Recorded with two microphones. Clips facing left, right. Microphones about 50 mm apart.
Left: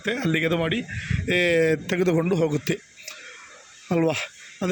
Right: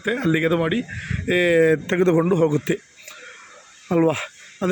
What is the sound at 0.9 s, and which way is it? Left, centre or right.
Speech, centre.